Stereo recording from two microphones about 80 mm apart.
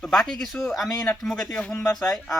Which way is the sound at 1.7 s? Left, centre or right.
Left.